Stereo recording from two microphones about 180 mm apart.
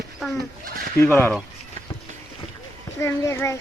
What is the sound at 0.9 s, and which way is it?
Speech, 15° left (ahead or behind).